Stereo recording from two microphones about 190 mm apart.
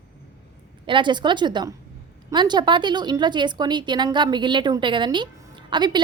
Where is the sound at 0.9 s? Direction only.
25° right (ahead or behind).